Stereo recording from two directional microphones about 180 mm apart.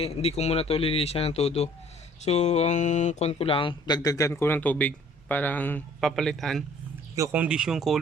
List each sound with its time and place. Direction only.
0.0 s speech: 35° left (ahead or behind); by 7.9 s centre (ahead or behind)